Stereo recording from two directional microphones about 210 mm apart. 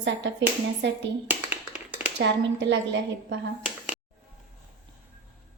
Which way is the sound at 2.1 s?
55° right (ahead or behind).